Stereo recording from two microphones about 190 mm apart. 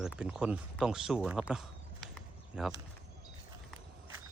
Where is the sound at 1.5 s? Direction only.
Centre (ahead or behind).